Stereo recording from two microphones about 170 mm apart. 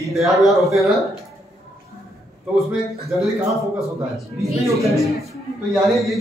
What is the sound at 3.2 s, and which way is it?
Speech, centre (ahead or behind).